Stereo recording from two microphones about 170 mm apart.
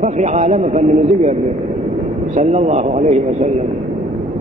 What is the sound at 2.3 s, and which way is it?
A man's voice, 40° right (ahead or behind).